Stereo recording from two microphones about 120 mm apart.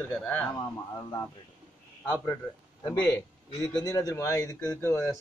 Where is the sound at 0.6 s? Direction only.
30° left (ahead or behind).